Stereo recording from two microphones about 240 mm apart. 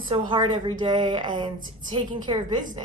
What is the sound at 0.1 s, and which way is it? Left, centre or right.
A woman's voice, centre.